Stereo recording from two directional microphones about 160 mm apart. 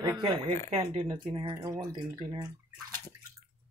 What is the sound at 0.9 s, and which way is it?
Speech, 35° right (ahead or behind).